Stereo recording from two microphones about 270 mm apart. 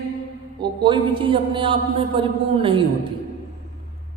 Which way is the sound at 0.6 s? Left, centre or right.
Centre.